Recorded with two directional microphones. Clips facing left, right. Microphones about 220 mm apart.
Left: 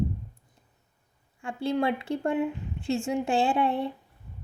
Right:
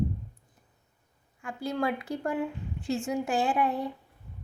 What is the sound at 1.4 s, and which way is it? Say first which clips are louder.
A woman's voice: left 4 dB; 30° left (ahead or behind).